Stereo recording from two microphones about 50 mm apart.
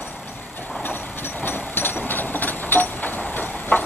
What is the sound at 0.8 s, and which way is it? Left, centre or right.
Vehicle, left.